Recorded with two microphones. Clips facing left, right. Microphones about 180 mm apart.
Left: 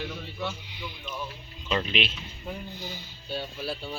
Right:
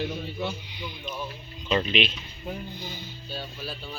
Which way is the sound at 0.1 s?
25° right (ahead or behind).